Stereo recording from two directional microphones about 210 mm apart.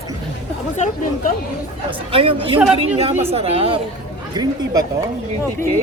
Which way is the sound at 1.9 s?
25° right (ahead or behind).